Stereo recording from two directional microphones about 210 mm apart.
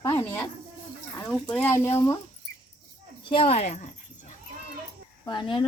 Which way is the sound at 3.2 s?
25° left (ahead or behind).